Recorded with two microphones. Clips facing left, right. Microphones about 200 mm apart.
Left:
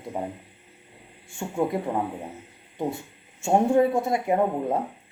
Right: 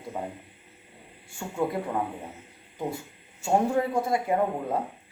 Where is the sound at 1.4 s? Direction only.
20° left (ahead or behind).